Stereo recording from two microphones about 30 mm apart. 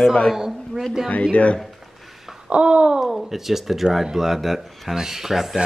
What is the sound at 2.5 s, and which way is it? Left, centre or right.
Speech, right.